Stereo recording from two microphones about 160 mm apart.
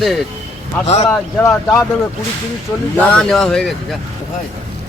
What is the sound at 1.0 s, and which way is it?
Speech, 15° left (ahead or behind).